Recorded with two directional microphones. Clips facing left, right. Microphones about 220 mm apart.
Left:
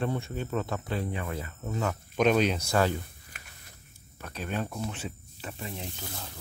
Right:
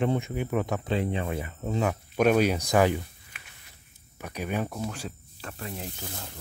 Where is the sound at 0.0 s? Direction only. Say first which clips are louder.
Right 4 dB; 15° right (ahead or behind).